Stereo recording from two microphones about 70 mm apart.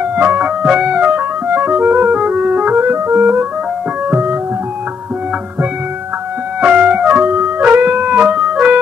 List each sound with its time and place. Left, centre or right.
0.0 s music: right
6.6 s music: centre